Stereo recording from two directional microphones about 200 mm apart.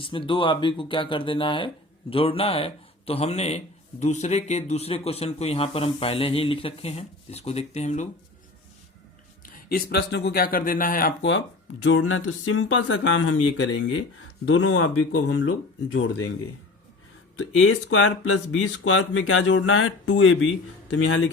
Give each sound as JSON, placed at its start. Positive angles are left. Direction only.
{"t": 0.0, "sound": "speech", "side_deg": 25}
{"t": 9.4, "sound": "speech", "side_deg": 45}
{"t": 11.2, "sound": "speech", "side_deg": 65}
{"t": 17.3, "sound": "speech", "side_deg": 80}